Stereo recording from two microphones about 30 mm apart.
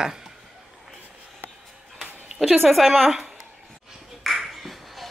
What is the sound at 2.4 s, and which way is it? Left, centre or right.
Speech, centre.